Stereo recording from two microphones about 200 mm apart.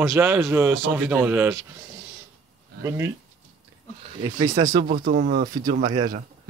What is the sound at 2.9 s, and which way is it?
Speech, 15° right (ahead or behind).